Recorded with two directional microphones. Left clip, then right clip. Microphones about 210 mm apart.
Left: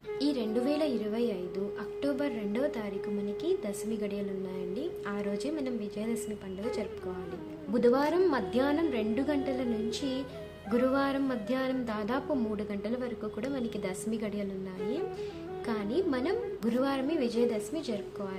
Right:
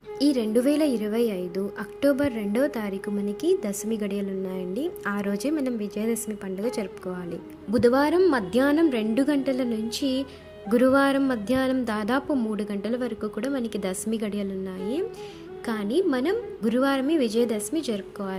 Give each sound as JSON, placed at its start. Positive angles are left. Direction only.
{"t": 0.2, "sound": "a woman's voice", "side_deg": -35}
{"t": 7.7, "sound": "a woman's voice", "side_deg": -25}
{"t": 15.6, "sound": "a woman's voice", "side_deg": -25}